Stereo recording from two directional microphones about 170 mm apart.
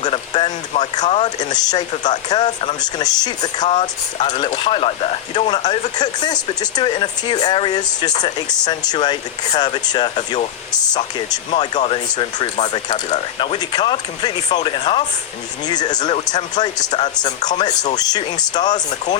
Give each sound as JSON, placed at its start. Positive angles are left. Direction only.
{"t": 0.0, "sound": "speech", "side_deg": 25}
{"t": 1.4, "sound": "speech", "side_deg": 25}
{"t": 12.1, "sound": "speech", "side_deg": 25}